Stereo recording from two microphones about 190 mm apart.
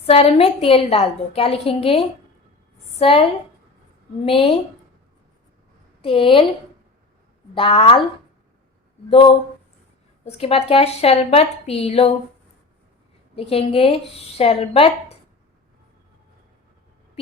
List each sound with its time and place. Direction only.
0.0 s a woman's voice: 30° left (ahead or behind)
4.3 s speech: 30° left (ahead or behind)
6.0 s a woman's voice: 25° left (ahead or behind)
7.5 s speech: 30° left (ahead or behind)
9.0 s a woman's voice: 30° left (ahead or behind)
13.3 s a woman's voice: 30° left (ahead or behind)